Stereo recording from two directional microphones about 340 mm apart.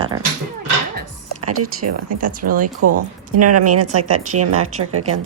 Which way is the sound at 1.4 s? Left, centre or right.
Right.